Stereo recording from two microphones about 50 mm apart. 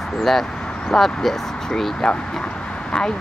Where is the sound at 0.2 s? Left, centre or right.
Centre.